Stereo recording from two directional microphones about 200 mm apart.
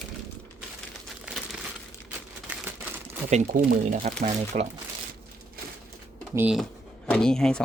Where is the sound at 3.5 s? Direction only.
45° right (ahead or behind).